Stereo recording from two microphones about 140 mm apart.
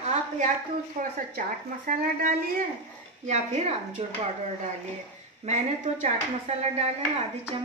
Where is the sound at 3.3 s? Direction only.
55° right (ahead or behind).